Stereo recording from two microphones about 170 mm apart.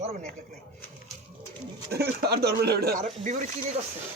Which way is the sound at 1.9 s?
70° right (ahead or behind).